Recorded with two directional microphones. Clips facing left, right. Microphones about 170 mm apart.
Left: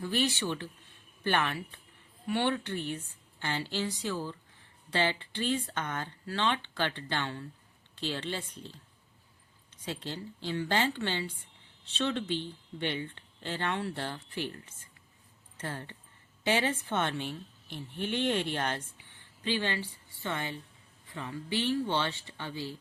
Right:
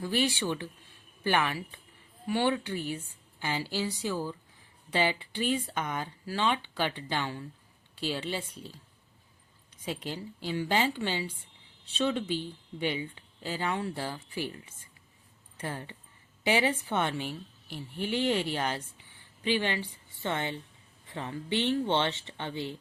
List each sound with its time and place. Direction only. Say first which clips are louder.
0.0 s speech: right 2 dB; 10° right (ahead or behind)
9.8 s speech: right 2 dB; 10° right (ahead or behind)